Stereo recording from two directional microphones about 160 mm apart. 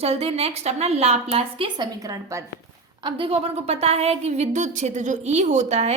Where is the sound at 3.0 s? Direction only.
35° right (ahead or behind).